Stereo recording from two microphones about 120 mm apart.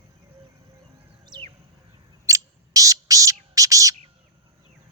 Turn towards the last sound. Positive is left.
turn(degrees=-25)  # may be behind; listen again after turning